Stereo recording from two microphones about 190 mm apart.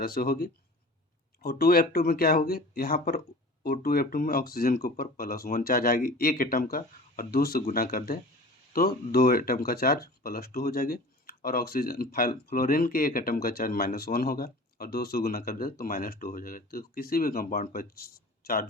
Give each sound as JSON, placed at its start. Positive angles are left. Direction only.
{"t": 0.0, "sound": "speech", "side_deg": 50}